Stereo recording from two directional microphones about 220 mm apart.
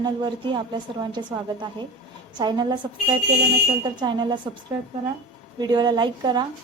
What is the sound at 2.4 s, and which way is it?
Speech, 20° right (ahead or behind).